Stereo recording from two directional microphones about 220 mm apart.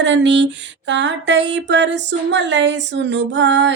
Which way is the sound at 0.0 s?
55° right (ahead or behind).